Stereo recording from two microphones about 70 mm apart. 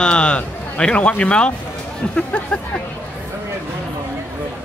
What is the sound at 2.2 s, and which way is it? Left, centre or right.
Speech, centre.